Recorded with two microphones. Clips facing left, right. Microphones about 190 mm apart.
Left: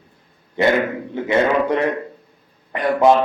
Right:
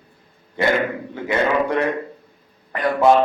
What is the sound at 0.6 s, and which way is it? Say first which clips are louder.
Speech: left 3 dB; 20° left (ahead or behind).